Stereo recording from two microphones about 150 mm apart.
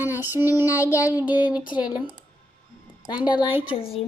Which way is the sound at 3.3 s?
30° left (ahead or behind).